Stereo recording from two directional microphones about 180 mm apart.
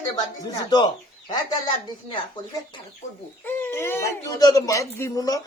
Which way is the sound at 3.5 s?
15° left (ahead or behind).